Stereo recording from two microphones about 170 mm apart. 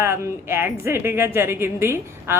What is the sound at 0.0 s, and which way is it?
A woman's voice, 15° right (ahead or behind).